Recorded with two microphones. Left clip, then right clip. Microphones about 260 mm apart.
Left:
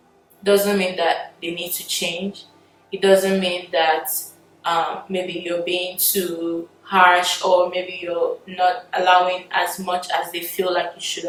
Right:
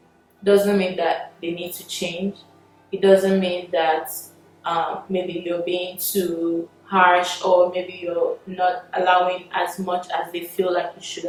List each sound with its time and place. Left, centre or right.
0.4 s a woman's voice: centre
6.9 s speech: centre
7.4 s speech: right
8.5 s speech: centre